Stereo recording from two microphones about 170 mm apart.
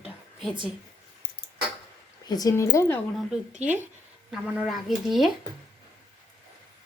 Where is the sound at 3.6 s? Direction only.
10° right (ahead or behind).